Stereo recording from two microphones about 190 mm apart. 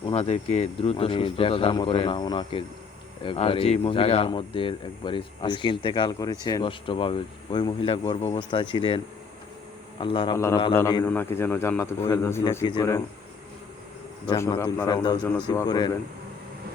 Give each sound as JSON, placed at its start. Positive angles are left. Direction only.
{"t": 0.0, "sound": "speech", "side_deg": 30}
{"t": 10.0, "sound": "speech", "side_deg": 25}
{"t": 10.3, "sound": "a man's voice", "side_deg": 15}
{"t": 14.3, "sound": "a man's voice", "side_deg": 20}
{"t": 15.2, "sound": "speech", "side_deg": 5}
{"t": 15.5, "sound": "speech", "side_deg": 20}